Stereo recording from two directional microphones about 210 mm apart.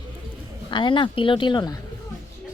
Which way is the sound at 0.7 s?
20° left (ahead or behind).